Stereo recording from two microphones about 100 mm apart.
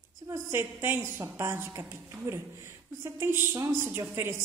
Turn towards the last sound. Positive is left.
turn(degrees=-25)  # may be behind; listen again after turning